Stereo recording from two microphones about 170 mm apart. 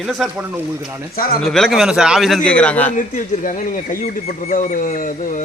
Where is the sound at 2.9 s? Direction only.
50° left (ahead or behind).